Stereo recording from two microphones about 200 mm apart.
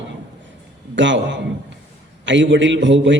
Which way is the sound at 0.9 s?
65° right (ahead or behind).